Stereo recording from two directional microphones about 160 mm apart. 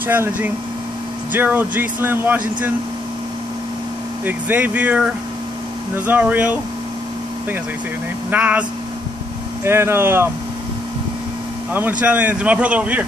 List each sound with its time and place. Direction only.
0.0 s speech: 10° right (ahead or behind)
4.2 s speech: 10° right (ahead or behind)
8.3 s speech: 10° right (ahead or behind)
9.7 s speech: 15° right (ahead or behind)
12.0 s speech: 10° right (ahead or behind)